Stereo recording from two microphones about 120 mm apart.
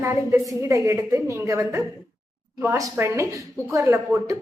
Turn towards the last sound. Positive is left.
turn(degrees=-25)  # may be behind; listen again after turning